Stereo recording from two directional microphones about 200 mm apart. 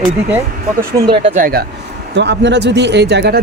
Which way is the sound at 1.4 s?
45° right (ahead or behind).